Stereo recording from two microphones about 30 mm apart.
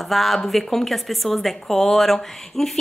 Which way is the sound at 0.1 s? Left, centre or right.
Centre.